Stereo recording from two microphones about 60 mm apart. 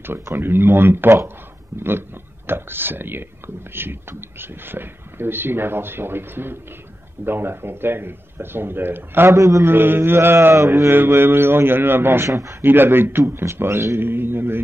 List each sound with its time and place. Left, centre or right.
0.0 s speech: right
9.3 s a man's voice: right
9.7 s speech: right
12.3 s a man's voice: right
12.6 s speech: right